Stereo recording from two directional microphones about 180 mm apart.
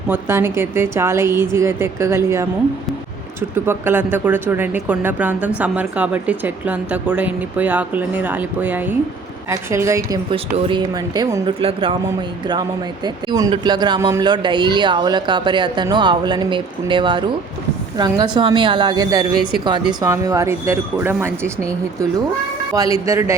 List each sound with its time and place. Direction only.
0.1 s speech: 15° right (ahead or behind)
3.5 s speech: 15° right (ahead or behind); by 11.9 s 30° right (ahead or behind)
13.1 s speech: 20° right (ahead or behind)
22.7 s speech: 20° right (ahead or behind)